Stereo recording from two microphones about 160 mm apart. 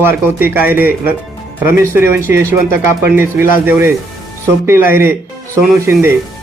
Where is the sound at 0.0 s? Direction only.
15° right (ahead or behind).